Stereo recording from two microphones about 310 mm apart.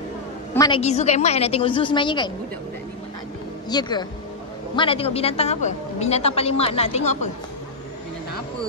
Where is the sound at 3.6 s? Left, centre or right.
Centre.